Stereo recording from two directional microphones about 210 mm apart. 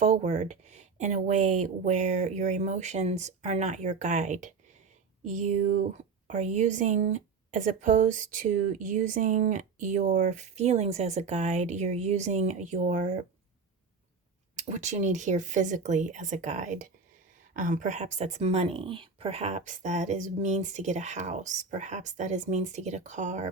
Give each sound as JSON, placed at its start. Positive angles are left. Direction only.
{"t": 0.0, "sound": "speech", "side_deg": -35}
{"t": 14.5, "sound": "speech", "side_deg": -35}